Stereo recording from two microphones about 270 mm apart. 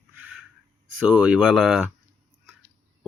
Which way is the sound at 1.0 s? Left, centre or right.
Centre.